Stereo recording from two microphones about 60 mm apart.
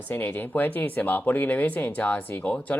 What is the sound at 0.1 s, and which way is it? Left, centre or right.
Speech, left.